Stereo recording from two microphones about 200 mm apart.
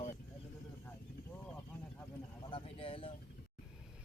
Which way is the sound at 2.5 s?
30° left (ahead or behind).